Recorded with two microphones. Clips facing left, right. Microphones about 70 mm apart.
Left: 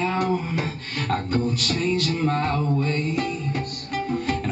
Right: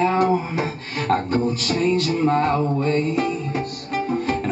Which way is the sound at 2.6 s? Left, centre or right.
Right.